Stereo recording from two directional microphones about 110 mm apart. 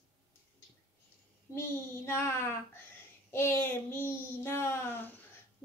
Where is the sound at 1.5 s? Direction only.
25° left (ahead or behind).